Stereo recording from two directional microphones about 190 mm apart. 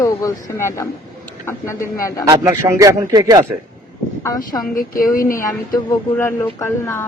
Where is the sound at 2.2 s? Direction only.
15° right (ahead or behind).